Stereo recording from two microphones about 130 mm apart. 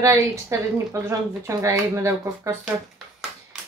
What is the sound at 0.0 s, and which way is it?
A woman's voice, 20° right (ahead or behind).